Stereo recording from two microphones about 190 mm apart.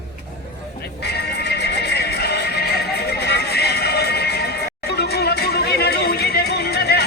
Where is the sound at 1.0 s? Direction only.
60° left (ahead or behind).